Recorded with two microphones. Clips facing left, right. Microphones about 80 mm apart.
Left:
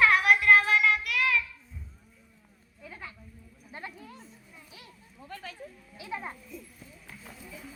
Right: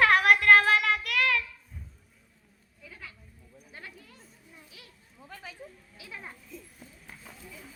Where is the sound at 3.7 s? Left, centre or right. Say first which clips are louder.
Left 5 dB; left.